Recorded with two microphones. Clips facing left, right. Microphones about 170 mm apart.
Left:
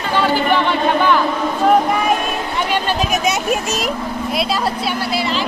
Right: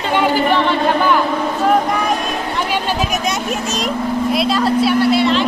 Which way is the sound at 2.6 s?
5° right (ahead or behind).